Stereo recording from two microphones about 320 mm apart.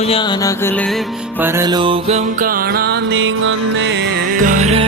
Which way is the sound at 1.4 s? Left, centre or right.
Centre.